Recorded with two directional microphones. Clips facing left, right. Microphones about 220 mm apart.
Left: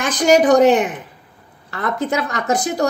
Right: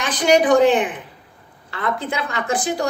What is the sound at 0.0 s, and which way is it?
A woman's voice, 45° left (ahead or behind).